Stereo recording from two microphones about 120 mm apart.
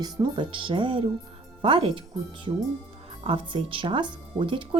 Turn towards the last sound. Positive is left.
turn(degrees=-45)  # may be behind; listen again after turning